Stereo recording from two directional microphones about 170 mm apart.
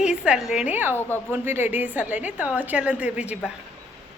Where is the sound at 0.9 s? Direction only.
10° left (ahead or behind).